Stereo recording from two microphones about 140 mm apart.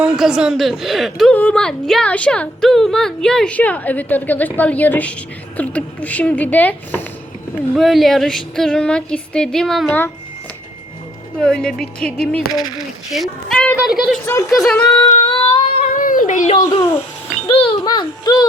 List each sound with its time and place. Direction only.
0.0 s speech: 5° right (ahead or behind); by 7.0 s 10° left (ahead or behind)
7.8 s speech: centre (ahead or behind)
11.3 s speech: 5° left (ahead or behind)
15.1 s a sound: 40° left (ahead or behind)
16.0 s a sound: 70° left (ahead or behind)
17.5 s a child's voice: 40° left (ahead or behind)